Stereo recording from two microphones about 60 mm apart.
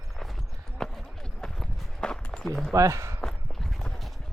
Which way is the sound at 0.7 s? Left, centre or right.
Centre.